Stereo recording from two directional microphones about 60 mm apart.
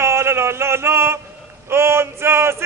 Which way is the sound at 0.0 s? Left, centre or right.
Right.